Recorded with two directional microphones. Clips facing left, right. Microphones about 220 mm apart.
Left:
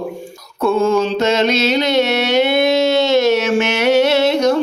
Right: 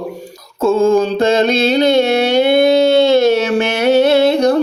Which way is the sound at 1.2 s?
55° right (ahead or behind).